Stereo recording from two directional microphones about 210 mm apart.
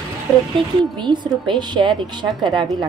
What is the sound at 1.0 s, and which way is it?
A woman's voice, 20° right (ahead or behind).